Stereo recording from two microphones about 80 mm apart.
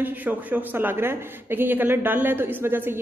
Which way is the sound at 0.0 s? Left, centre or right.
Right.